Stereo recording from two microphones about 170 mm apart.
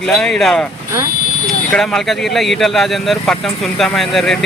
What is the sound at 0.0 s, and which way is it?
Speech, 5° left (ahead or behind).